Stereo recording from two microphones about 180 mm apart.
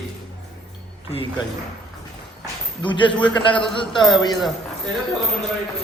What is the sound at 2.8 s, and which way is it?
A man's voice, 25° left (ahead or behind).